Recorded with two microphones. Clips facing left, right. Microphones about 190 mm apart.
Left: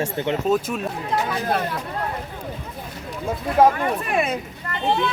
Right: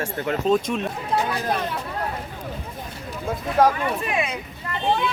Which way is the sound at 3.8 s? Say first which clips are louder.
Left 2 dB; 50° left (ahead or behind).